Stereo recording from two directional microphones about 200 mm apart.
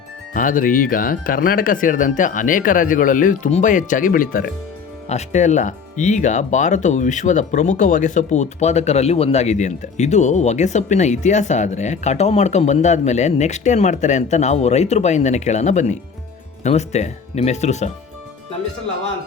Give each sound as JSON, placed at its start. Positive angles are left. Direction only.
{"t": 0.3, "sound": "speech", "side_deg": 40}